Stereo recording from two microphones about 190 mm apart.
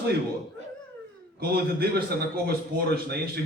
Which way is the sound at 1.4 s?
55° right (ahead or behind).